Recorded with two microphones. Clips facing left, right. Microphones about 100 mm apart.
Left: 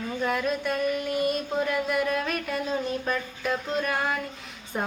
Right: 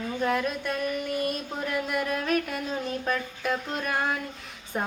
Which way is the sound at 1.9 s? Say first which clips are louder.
Left 1 dB; centre (ahead or behind).